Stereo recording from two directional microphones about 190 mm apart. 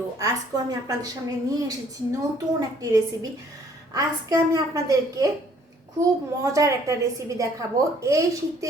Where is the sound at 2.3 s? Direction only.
20° right (ahead or behind).